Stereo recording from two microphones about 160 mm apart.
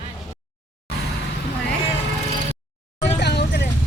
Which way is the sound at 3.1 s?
90° left.